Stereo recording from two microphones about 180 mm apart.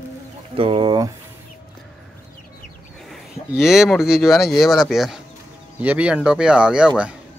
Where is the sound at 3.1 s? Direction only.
Centre (ahead or behind).